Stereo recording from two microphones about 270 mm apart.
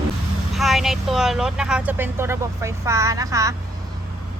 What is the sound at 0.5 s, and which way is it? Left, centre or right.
A woman's voice, centre.